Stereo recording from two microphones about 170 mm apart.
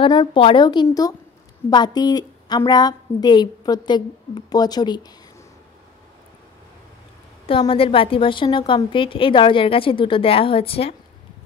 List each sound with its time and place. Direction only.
0.0 s a woman's voice: 25° left (ahead or behind)
7.4 s a woman's voice: 30° left (ahead or behind)